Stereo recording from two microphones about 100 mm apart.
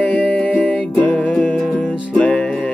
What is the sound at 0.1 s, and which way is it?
Music, 15° left (ahead or behind).